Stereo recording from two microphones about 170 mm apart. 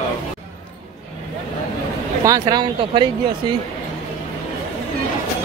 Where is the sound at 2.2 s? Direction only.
20° right (ahead or behind).